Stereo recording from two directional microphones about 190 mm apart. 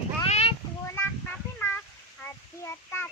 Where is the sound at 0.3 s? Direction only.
35° left (ahead or behind).